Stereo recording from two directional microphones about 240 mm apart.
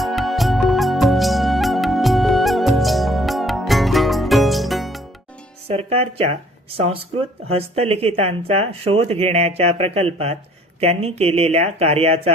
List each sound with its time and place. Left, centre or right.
0.0 s music: centre
5.6 s speech: right